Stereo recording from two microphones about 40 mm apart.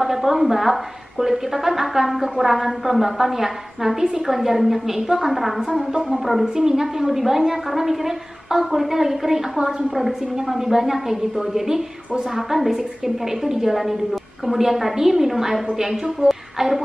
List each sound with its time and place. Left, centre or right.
0.0 s a woman's voice: centre
9.6 s a woman's voice: centre
9.9 s a woman's voice: centre